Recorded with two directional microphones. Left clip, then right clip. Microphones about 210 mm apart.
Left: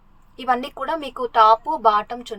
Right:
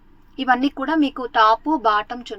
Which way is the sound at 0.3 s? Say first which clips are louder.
Right 3 dB; 5° right (ahead or behind).